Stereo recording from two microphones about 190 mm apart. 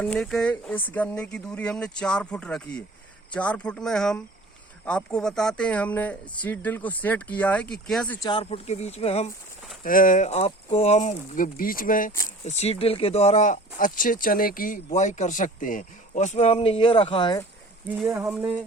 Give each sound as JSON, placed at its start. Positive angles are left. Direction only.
{"t": 0.0, "sound": "speech", "side_deg": 5}
{"t": 8.2, "sound": "speech", "side_deg": 25}
{"t": 9.8, "sound": "speech", "side_deg": 45}
{"t": 12.5, "sound": "speech", "side_deg": 35}
{"t": 17.8, "sound": "speech", "side_deg": -5}